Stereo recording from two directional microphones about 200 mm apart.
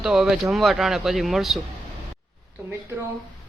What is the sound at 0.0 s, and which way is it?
Speech, centre (ahead or behind).